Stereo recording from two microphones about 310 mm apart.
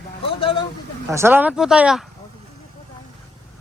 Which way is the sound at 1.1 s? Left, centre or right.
Centre.